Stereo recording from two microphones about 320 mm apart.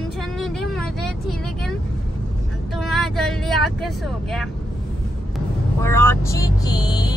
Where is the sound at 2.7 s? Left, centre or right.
Centre.